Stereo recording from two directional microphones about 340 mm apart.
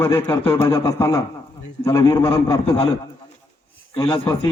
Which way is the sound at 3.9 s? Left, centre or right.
Centre.